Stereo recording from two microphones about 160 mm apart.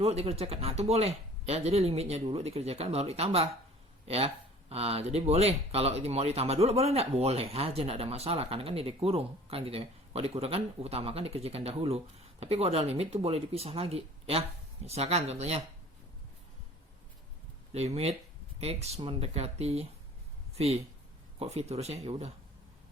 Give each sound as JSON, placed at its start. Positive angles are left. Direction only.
{"t": 0.0, "sound": "speech", "side_deg": -40}
{"t": 4.7, "sound": "speech", "side_deg": -40}
{"t": 17.7, "sound": "speech", "side_deg": -40}